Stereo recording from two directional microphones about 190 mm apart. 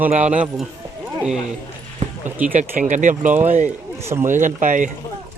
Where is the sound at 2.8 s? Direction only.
40° right (ahead or behind).